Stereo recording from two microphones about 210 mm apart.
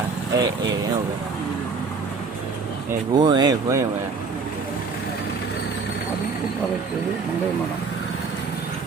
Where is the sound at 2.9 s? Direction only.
20° right (ahead or behind).